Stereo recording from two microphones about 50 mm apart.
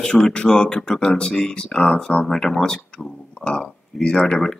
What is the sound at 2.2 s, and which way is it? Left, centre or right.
Speech, centre.